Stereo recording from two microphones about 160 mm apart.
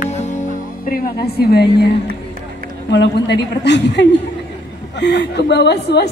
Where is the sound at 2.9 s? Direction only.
90° left.